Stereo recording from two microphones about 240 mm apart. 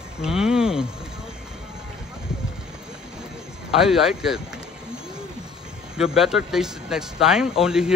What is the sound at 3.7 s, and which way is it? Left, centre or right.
Speech, centre.